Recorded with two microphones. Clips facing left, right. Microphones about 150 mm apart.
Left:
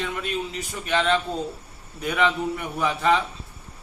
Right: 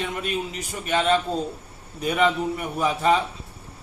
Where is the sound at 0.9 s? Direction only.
10° right (ahead or behind).